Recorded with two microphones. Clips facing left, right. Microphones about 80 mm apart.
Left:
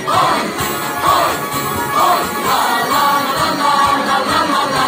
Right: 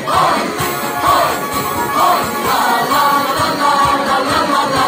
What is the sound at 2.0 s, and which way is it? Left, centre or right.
Music, right.